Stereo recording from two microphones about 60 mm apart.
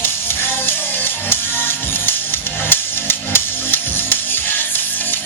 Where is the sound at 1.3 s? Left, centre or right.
Left.